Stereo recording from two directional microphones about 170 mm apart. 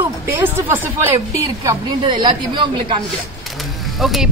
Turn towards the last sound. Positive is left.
turn(degrees=0)  # may be behind; listen again after turning